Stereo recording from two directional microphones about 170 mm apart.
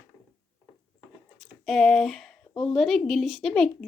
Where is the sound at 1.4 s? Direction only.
Centre (ahead or behind).